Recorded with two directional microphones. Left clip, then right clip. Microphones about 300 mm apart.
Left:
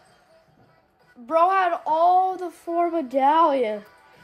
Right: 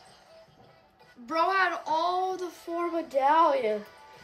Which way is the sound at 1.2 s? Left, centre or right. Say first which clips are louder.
Left 6 dB; centre.